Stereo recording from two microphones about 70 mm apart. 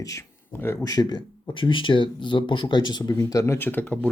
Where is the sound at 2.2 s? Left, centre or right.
Left.